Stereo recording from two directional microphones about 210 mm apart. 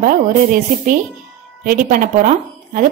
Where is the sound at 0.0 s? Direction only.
35° right (ahead or behind).